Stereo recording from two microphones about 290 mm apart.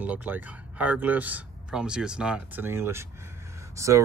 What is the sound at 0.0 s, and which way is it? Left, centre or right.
A man's voice, centre.